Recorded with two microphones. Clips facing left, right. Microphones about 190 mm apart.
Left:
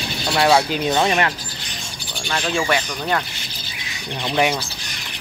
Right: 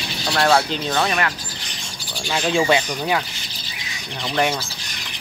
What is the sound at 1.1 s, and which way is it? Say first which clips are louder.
Speech: left 3 dB; 25° left (ahead or behind).